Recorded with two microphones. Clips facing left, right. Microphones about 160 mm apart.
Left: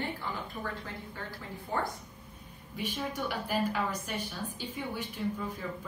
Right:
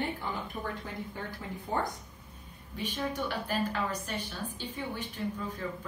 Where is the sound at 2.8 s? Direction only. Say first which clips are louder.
Right 1 dB; 10° left (ahead or behind).